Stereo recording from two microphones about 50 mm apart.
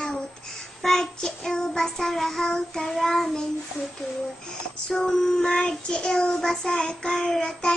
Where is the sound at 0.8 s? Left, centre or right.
Centre.